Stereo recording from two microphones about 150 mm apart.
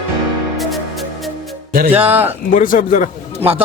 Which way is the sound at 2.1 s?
15° right (ahead or behind).